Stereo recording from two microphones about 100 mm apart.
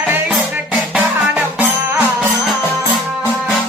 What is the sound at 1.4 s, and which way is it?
Music, 20° right (ahead or behind).